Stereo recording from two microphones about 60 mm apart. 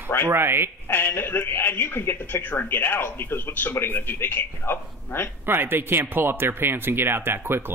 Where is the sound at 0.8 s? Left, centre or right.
Left.